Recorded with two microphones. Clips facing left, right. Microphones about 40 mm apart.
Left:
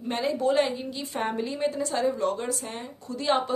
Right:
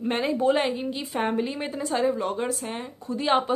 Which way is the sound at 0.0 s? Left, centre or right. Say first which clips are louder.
Right 3 dB; right.